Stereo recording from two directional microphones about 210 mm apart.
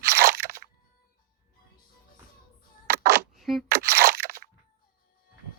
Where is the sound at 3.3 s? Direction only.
Centre (ahead or behind).